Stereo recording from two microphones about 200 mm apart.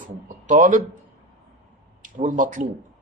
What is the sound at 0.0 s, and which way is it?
Speech, 40° right (ahead or behind).